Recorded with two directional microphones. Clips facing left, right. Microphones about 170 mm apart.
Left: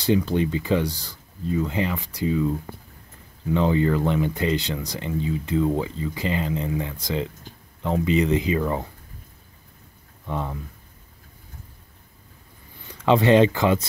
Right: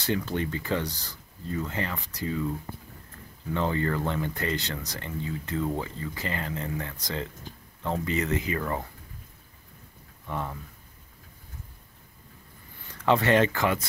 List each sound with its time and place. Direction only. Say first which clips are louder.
0.0 s speech: left 7 dB; 15° left (ahead or behind)
3.5 s speech: left 7 dB; 15° left (ahead or behind)
10.2 s speech: left 4 dB; 15° left (ahead or behind)
12.8 s speech: left 5 dB; 20° left (ahead or behind)